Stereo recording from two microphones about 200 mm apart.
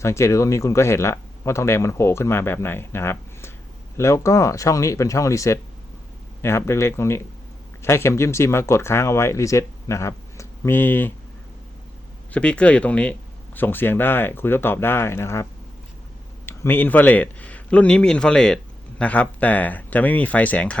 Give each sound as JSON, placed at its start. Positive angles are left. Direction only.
{"t": 0.0, "sound": "speech", "side_deg": 15}
{"t": 12.3, "sound": "speech", "side_deg": 5}
{"t": 16.5, "sound": "speech", "side_deg": 10}